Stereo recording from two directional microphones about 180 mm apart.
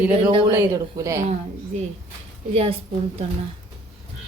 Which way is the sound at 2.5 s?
35° right (ahead or behind).